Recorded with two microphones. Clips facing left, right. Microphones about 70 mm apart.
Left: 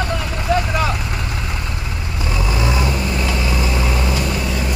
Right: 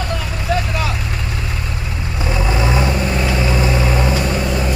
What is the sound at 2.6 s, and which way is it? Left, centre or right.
Vehicle, right.